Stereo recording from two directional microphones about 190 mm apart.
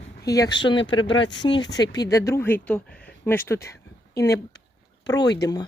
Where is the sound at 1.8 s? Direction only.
20° left (ahead or behind).